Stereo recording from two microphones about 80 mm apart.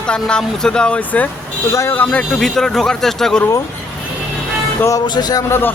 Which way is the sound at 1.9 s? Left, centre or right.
Centre.